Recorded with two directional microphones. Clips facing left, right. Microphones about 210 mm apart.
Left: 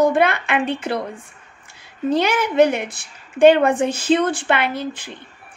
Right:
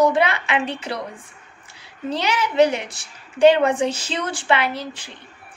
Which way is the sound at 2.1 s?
50° left (ahead or behind).